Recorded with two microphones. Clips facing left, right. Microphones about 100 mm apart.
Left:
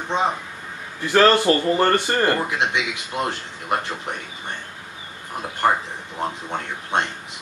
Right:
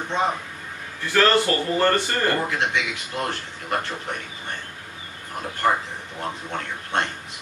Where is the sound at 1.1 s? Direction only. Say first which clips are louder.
Left 4 dB; 20° left (ahead or behind).